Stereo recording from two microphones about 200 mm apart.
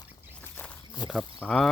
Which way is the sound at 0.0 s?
10° left (ahead or behind).